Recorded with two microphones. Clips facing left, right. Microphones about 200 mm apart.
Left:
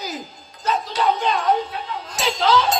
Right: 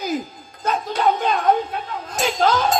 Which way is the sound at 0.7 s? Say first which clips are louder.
Right 1 dB; 50° right (ahead or behind).